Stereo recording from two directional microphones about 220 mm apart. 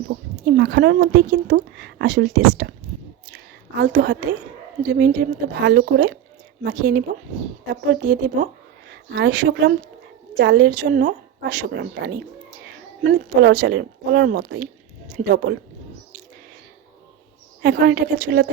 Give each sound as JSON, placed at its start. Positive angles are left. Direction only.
{"t": 0.1, "sound": "a woman's voice", "side_deg": -45}
{"t": 3.8, "sound": "a woman's voice", "side_deg": -45}
{"t": 17.6, "sound": "a woman's voice", "side_deg": -45}